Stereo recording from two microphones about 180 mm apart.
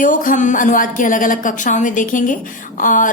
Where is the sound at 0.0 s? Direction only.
45° left (ahead or behind).